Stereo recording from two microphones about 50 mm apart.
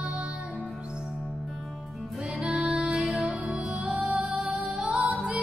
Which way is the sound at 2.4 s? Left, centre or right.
Right.